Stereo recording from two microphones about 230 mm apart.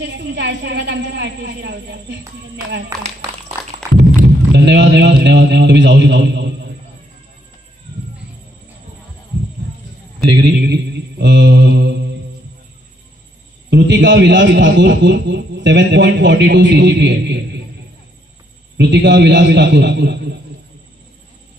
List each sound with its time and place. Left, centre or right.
0.0 s a man's voice: right
3.9 s a sound: right
10.3 s mantra: right
13.7 s a man's voice: right
18.8 s a man's voice: right